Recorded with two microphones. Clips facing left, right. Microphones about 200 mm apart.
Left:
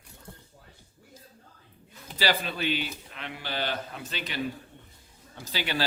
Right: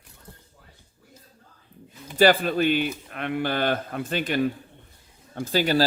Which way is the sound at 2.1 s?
50° right (ahead or behind).